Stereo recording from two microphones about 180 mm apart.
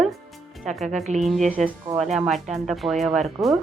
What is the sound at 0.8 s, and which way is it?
Speech, 40° right (ahead or behind).